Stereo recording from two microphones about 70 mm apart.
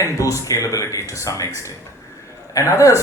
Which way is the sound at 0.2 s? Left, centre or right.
Left.